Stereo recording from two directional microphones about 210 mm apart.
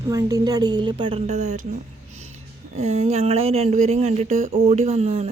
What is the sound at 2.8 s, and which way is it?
A woman's voice, 30° right (ahead or behind).